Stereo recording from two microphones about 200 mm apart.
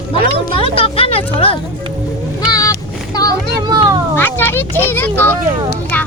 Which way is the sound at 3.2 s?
20° left (ahead or behind).